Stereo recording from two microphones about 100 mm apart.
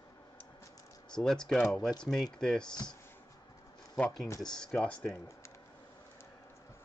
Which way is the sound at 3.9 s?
15° left (ahead or behind).